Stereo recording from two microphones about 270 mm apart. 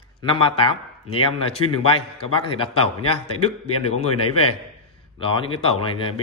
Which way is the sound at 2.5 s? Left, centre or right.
Centre.